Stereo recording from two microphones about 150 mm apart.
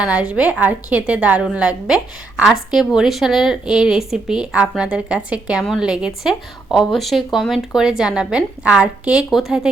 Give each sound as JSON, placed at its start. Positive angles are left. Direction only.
{"t": 0.0, "sound": "a woman's voice", "side_deg": -5}